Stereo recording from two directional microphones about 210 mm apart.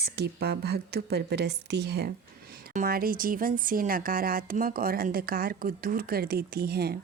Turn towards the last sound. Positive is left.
turn(degrees=-50)  # may be behind; listen again after turning